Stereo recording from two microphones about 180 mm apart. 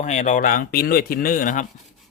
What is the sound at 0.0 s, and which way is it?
Speech, 40° left (ahead or behind).